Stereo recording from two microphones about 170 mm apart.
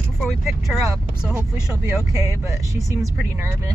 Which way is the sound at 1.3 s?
20° right (ahead or behind).